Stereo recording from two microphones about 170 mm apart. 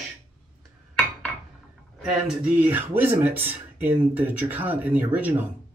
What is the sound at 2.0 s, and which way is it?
Speech, 5° right (ahead or behind).